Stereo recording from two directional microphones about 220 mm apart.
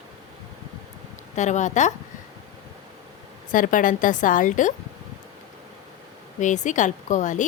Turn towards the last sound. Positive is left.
turn(degrees=35)  # may be behind; listen again after turning